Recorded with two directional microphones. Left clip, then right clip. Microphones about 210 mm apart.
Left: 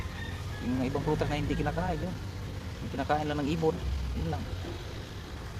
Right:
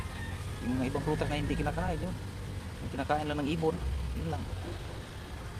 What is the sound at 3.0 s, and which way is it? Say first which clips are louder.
Speech: left 2 dB; 5° left (ahead or behind).